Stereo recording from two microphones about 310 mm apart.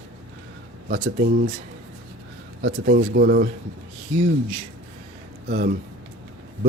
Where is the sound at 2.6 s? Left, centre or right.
Right.